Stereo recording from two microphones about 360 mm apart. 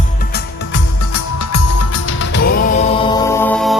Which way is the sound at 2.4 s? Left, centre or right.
Left.